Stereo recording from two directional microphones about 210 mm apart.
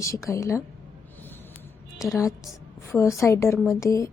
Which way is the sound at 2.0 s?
15° left (ahead or behind).